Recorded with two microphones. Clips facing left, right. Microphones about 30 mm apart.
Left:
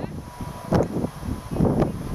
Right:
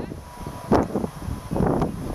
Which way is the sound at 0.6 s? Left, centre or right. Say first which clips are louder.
Right 2 dB; centre.